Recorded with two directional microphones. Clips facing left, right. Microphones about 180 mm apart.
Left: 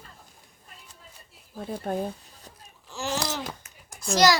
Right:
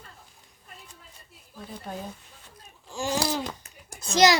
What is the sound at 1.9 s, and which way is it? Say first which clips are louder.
Speech: left 8 dB; 50° left (ahead or behind).